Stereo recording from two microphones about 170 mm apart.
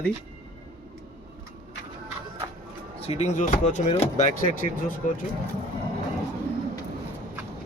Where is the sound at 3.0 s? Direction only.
40° left (ahead or behind).